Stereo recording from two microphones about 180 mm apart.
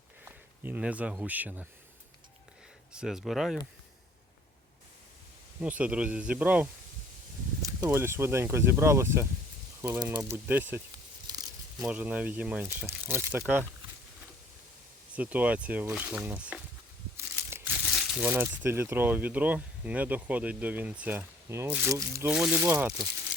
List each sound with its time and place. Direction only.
0.3 s speech: 10° right (ahead or behind)
2.9 s speech: 5° right (ahead or behind)
5.5 s speech: 10° right (ahead or behind)
11.3 s a sound: 20° right (ahead or behind)
11.9 s speech: 10° right (ahead or behind)
15.1 s speech: 10° right (ahead or behind)
22.4 s speech: 5° right (ahead or behind)